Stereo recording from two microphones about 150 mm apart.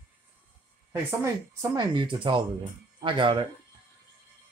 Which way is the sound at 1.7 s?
30° right (ahead or behind).